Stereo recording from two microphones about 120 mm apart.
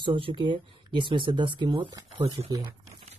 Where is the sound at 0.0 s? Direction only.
45° right (ahead or behind).